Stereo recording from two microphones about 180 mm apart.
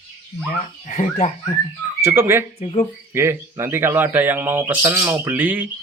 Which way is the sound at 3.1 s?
15° right (ahead or behind).